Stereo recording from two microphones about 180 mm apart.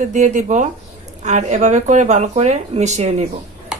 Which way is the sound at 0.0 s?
40° right (ahead or behind).